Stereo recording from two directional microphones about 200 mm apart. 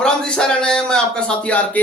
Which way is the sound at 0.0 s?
5° left (ahead or behind).